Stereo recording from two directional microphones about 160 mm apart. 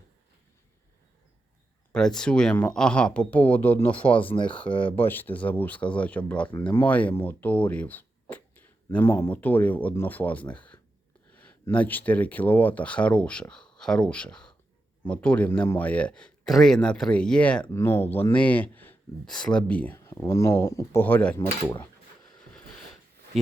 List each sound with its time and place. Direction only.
1.9 s speech: 5° left (ahead or behind)
4.2 s speech: 35° left (ahead or behind)
4.4 s speech: 10° left (ahead or behind)
4.7 s speech: 35° left (ahead or behind)
5.0 s speech: 10° left (ahead or behind)
23.3 s speech: centre (ahead or behind)